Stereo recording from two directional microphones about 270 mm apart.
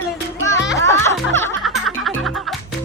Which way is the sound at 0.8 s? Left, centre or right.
Centre.